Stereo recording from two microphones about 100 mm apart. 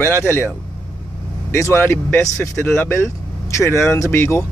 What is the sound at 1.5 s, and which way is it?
A man's voice, 25° left (ahead or behind).